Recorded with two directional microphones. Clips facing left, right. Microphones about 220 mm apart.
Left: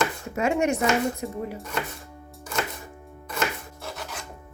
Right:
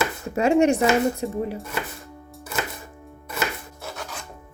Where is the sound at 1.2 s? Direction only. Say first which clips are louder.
Right 4 dB; 30° right (ahead or behind).